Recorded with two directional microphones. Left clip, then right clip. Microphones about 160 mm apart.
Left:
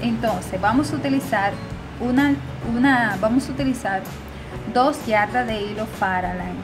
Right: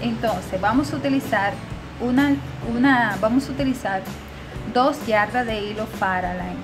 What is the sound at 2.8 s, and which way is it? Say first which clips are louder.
A woman's voice: even; 5° left (ahead or behind).